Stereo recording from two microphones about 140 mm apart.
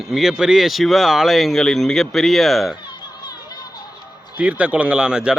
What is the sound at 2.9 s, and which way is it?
Music, 30° left (ahead or behind).